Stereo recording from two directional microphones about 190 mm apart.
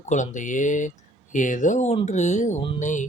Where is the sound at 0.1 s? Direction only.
40° left (ahead or behind).